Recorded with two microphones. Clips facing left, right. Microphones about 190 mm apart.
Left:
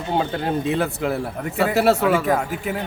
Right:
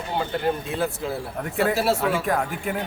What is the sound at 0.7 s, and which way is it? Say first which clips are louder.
A man's voice: left 4 dB; 65° left (ahead or behind).